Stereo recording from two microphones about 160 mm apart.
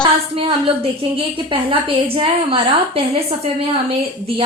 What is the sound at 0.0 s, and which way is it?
A woman's voice, 35° right (ahead or behind).